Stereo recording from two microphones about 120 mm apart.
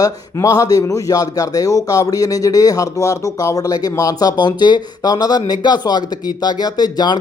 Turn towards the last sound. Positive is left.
turn(degrees=35)  # may be behind; listen again after turning